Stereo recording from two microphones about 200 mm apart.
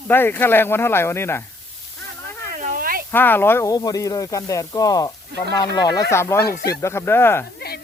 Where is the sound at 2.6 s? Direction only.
40° right (ahead or behind).